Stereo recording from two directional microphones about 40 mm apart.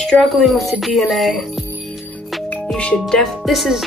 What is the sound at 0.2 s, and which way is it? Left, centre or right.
Speech, centre.